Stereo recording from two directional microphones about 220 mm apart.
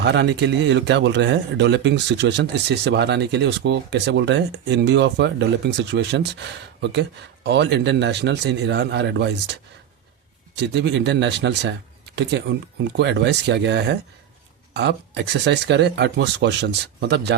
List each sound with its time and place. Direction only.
0.0 s speech: 50° right (ahead or behind)
7.4 s speech: 50° right (ahead or behind)